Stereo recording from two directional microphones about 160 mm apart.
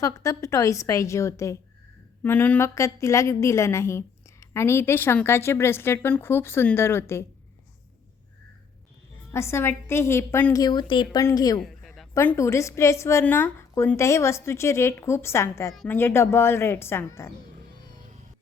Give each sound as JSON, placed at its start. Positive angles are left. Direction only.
{"t": 0.0, "sound": "a woman's voice", "side_deg": 20}
{"t": 9.3, "sound": "a woman's voice", "side_deg": 15}
{"t": 11.6, "sound": "a sound", "side_deg": 0}
{"t": 12.1, "sound": "a woman's voice", "side_deg": 15}
{"t": 15.7, "sound": "speech", "side_deg": 0}
{"t": 16.0, "sound": "a woman's voice", "side_deg": 15}